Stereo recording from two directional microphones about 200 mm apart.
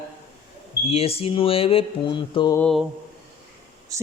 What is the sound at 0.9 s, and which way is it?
Mantra, 30° left (ahead or behind).